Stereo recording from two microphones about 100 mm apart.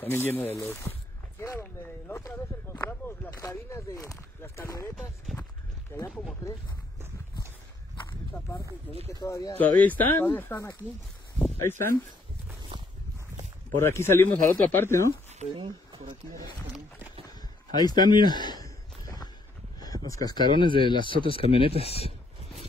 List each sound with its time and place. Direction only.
0.0 s speech: 20° left (ahead or behind)
1.4 s a sound: 25° left (ahead or behind)
3.3 s speech: 30° left (ahead or behind)
9.2 s speech: 35° left (ahead or behind)
9.6 s speech: 15° left (ahead or behind)
13.7 s speech: 25° left (ahead or behind)
15.5 s speech: 55° right (ahead or behind)
17.3 s a sound: 40° left (ahead or behind)
19.8 s a sound: 40° left (ahead or behind)
20.5 s speech: 55° left (ahead or behind)
21.5 s speech: 75° left (ahead or behind)
21.8 s speech: 90° left